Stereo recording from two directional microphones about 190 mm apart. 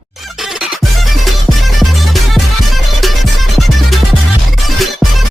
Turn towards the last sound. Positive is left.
turn(degrees=0)  # may be behind; listen again after turning